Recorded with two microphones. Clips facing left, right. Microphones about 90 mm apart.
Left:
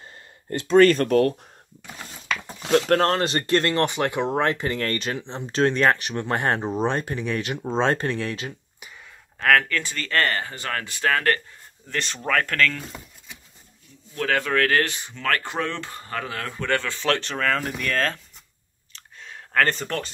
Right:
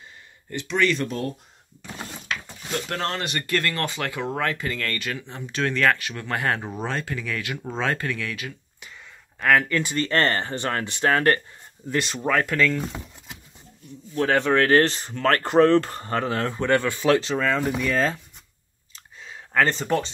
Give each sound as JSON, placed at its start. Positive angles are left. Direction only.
{"t": 0.5, "sound": "speech", "side_deg": 40}
{"t": 2.9, "sound": "speech", "side_deg": 40}
{"t": 9.4, "sound": "speech", "side_deg": -5}
{"t": 9.7, "sound": "speech", "side_deg": -20}
{"t": 12.0, "sound": "speech", "side_deg": -5}
{"t": 14.1, "sound": "speech", "side_deg": -25}
{"t": 19.2, "sound": "a sound", "side_deg": -5}